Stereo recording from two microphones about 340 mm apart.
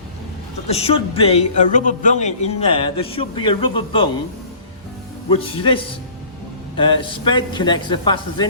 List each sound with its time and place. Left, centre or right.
0.7 s speech: centre
5.3 s speech: centre